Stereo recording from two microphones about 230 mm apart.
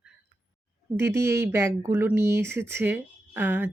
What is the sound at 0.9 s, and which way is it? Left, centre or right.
Speech, centre.